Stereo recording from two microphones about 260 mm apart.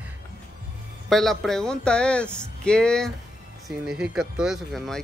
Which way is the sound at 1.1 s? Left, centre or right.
Centre.